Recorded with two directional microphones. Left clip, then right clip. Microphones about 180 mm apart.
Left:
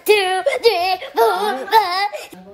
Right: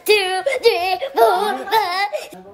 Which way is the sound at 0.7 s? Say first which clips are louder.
Even; 20° right (ahead or behind).